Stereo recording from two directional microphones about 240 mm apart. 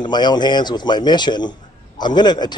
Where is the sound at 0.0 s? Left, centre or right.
Centre.